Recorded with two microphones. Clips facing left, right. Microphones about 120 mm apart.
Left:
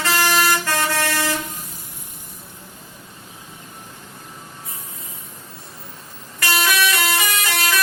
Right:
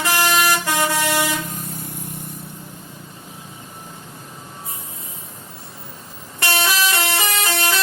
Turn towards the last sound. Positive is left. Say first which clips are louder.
# right 1 dB
turn(degrees=-30)  # may be behind; listen again after turning